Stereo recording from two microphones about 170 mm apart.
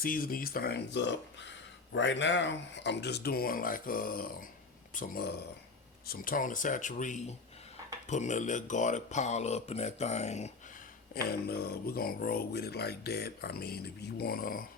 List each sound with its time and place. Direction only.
0.0 s speech: 55° left (ahead or behind); by 10.5 s 40° left (ahead or behind)
11.1 s speech: 65° left (ahead or behind)